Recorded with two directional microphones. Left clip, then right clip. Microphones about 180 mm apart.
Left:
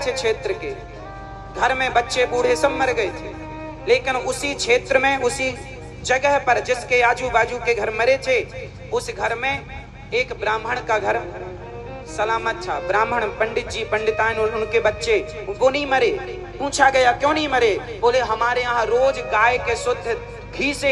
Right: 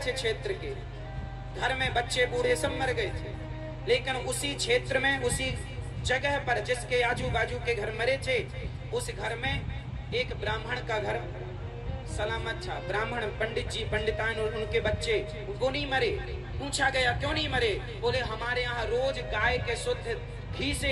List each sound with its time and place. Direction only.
0.0 s speech: 10° left (ahead or behind)
12.2 s speech: 10° left (ahead or behind)
17.4 s a man's voice: 40° left (ahead or behind)
19.0 s speech: 10° left (ahead or behind)